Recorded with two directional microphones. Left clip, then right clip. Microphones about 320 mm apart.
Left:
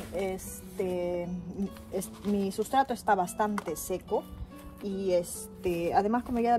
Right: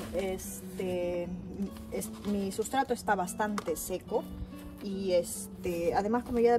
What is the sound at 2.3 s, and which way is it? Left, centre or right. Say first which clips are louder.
Speech: left 4 dB; centre.